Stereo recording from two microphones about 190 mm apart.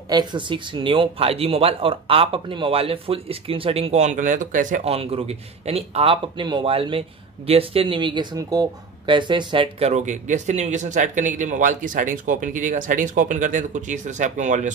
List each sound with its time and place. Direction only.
0.1 s speech: 25° right (ahead or behind); by 14.7 s 40° right (ahead or behind)